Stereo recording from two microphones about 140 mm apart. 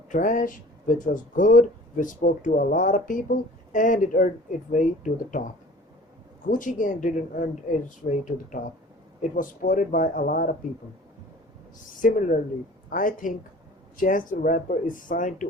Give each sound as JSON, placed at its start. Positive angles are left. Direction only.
{"t": 0.1, "sound": "speech", "side_deg": 65}
{"t": 6.5, "sound": "speech", "side_deg": 70}
{"t": 11.9, "sound": "speech", "side_deg": 70}